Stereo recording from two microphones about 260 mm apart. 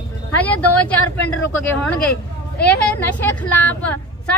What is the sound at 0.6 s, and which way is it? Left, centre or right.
A woman's voice, centre.